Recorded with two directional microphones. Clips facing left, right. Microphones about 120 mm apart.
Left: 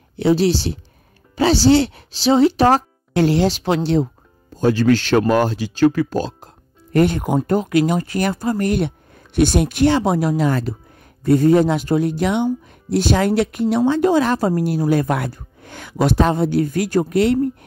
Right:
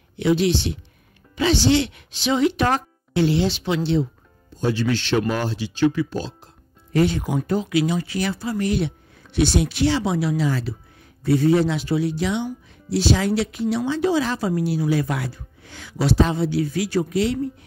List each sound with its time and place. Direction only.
0.1 s a woman's voice: 35° left (ahead or behind); by 17.6 s 55° left (ahead or behind)